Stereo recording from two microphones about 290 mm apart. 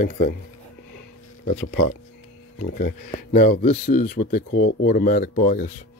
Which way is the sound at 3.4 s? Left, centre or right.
Left.